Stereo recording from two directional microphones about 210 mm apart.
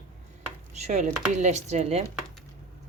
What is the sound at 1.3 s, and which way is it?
Speech, 35° right (ahead or behind).